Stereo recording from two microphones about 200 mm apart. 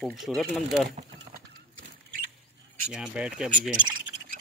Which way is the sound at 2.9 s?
5° right (ahead or behind).